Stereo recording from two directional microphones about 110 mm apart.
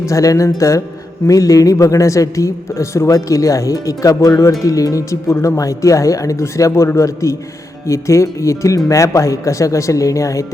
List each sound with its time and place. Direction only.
0.1 s a man's voice: 30° left (ahead or behind)